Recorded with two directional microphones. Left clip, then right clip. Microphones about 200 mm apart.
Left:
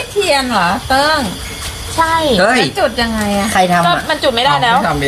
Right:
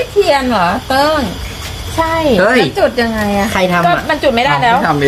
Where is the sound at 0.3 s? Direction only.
20° right (ahead or behind).